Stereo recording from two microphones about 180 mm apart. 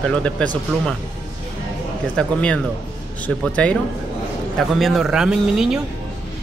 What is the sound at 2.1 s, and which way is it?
A man's voice, 5° left (ahead or behind).